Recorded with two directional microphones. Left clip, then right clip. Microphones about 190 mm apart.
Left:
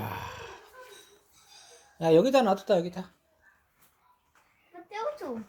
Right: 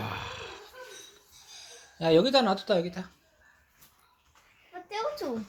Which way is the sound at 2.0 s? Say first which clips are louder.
Left 1 dB; 25° left (ahead or behind).